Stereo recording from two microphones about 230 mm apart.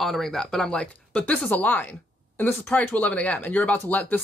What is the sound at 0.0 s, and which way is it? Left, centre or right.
Speech, centre.